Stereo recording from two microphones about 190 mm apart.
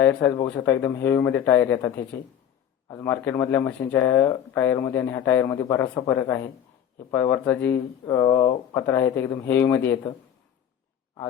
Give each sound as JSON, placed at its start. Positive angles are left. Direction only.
{"t": 0.0, "sound": "speech", "side_deg": 10}
{"t": 2.9, "sound": "speech", "side_deg": 10}